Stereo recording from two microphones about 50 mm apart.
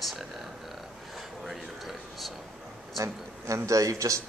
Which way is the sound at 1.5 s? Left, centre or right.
Centre.